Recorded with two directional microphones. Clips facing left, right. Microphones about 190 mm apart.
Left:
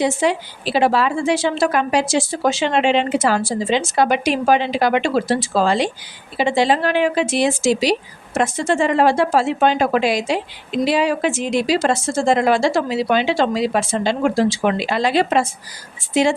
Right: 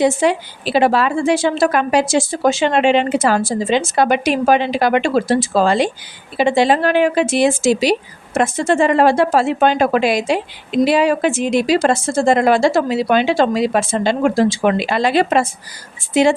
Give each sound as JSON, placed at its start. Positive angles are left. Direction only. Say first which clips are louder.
{"t": 0.0, "sound": "a woman's voice", "louder": "right 3 dB", "side_deg": -55}